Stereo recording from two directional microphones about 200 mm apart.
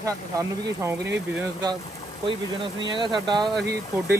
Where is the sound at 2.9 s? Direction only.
25° right (ahead or behind).